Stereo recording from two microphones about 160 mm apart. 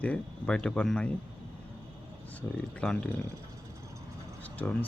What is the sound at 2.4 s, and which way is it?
Speech, 5° left (ahead or behind).